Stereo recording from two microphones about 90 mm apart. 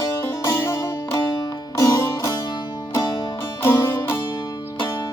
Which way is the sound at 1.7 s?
40° left (ahead or behind).